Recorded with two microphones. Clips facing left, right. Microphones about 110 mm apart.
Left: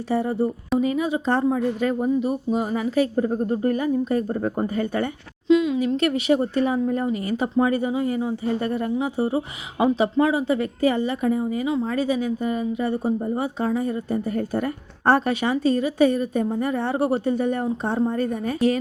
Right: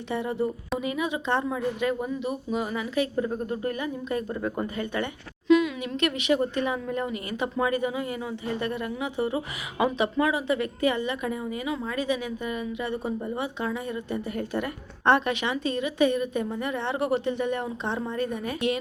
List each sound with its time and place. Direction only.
0.1 s speech: 35° left (ahead or behind)
5.5 s speech: 30° left (ahead or behind)